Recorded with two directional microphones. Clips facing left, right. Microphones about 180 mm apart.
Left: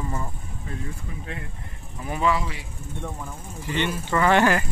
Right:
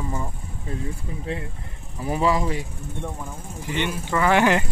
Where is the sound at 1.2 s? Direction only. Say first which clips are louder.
Right 6 dB; 30° right (ahead or behind).